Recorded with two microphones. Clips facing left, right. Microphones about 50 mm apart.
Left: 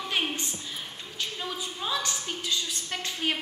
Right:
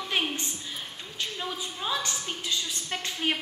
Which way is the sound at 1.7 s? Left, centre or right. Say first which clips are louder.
Even; centre.